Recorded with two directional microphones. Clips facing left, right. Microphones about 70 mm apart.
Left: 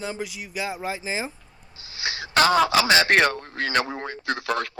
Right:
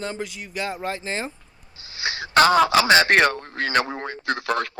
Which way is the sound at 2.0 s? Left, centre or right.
Right.